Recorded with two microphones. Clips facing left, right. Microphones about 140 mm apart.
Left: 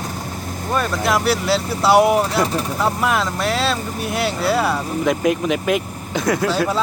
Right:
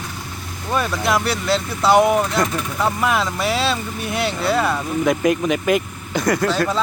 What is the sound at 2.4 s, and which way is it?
Speech, 35° left (ahead or behind).